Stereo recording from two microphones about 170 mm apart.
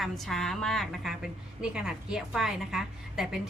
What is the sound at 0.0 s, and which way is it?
A woman's voice, centre (ahead or behind).